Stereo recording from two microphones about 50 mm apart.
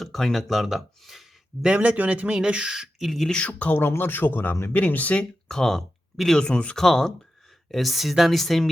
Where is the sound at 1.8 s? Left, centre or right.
Right.